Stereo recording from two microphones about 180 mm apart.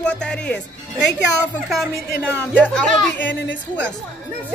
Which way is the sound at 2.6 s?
5° left (ahead or behind).